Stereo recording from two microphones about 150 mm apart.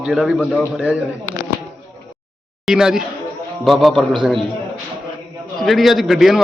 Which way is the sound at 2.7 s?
5° right (ahead or behind).